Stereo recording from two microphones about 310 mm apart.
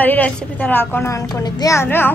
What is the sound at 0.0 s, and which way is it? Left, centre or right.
A woman's voice, centre.